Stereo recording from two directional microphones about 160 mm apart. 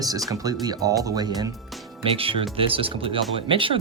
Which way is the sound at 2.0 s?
35° right (ahead or behind).